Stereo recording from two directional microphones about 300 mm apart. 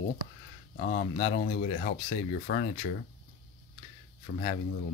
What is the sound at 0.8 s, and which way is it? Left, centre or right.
Speech, left.